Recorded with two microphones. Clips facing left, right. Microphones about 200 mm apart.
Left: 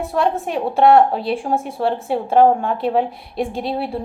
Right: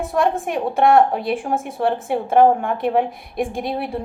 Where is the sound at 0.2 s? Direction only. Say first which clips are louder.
Even; 50° right (ahead or behind).